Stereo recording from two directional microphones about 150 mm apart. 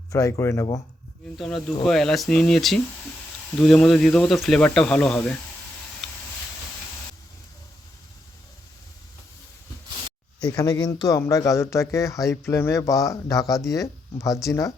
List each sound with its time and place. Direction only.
0.1 s speech: 20° left (ahead or behind)
1.4 s speech: 5° left (ahead or behind)
6.0 s a sound: centre (ahead or behind)
10.5 s speech: 25° left (ahead or behind)